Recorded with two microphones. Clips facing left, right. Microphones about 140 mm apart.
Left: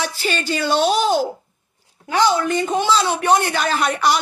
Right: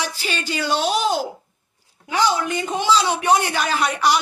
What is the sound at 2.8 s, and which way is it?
Speech, 15° right (ahead or behind).